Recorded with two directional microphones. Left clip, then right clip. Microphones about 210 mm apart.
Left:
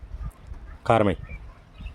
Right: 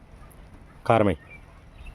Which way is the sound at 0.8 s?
Centre (ahead or behind).